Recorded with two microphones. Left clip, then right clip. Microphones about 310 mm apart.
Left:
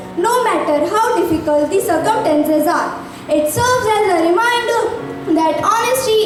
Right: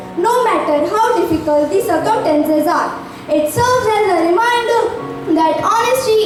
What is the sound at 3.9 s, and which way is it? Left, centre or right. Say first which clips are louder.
A child's voice: even; centre.